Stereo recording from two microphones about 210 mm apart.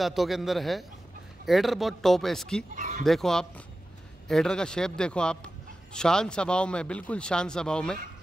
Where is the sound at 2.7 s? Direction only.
35° right (ahead or behind).